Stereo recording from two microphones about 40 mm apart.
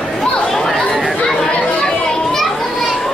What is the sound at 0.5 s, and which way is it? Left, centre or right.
Chatter, centre.